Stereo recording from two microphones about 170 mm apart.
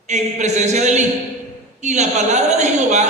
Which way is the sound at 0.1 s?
45° right (ahead or behind).